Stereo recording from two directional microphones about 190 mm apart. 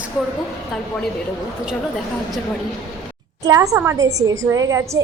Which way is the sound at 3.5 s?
15° right (ahead or behind).